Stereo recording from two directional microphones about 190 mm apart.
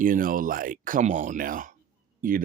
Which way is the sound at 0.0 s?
45° right (ahead or behind).